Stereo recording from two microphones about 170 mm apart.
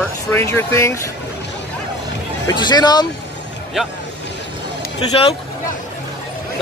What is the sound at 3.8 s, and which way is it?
Speech, centre (ahead or behind).